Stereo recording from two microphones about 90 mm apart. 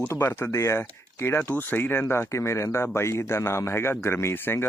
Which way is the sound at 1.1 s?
30° left (ahead or behind).